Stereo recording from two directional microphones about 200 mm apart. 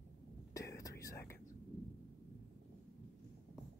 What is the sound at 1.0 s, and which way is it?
Whispering, 15° left (ahead or behind).